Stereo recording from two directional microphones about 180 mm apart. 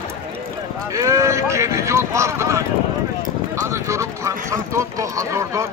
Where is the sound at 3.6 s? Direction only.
15° right (ahead or behind).